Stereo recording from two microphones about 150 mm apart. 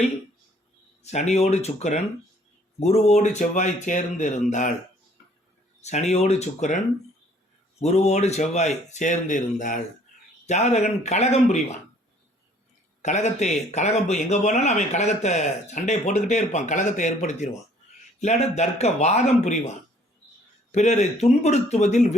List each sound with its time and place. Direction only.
1.0 s speech: 50° left (ahead or behind)
5.8 s speech: 50° left (ahead or behind)
7.8 s speech: 50° left (ahead or behind)
13.0 s speech: 50° left (ahead or behind)
20.7 s speech: 50° left (ahead or behind)